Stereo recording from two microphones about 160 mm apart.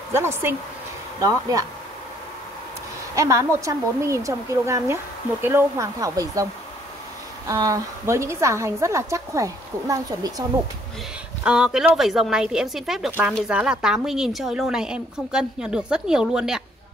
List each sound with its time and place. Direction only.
0.1 s a woman's voice: 15° right (ahead or behind)
3.2 s a woman's voice: 20° right (ahead or behind)
7.4 s a woman's voice: 20° right (ahead or behind)
11.4 s a woman's voice: 5° right (ahead or behind)